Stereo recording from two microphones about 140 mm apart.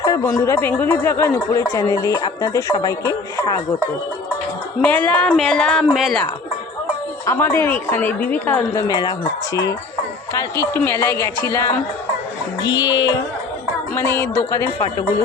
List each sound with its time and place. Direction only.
0.0 s speech: 25° left (ahead or behind)
4.8 s speech: 10° left (ahead or behind)
5.4 s music: 5° left (ahead or behind)
7.3 s speech: 20° left (ahead or behind)
8.7 s speech: 25° left (ahead or behind)
10.8 s speech: 15° left (ahead or behind)
13.9 s speech: 15° left (ahead or behind)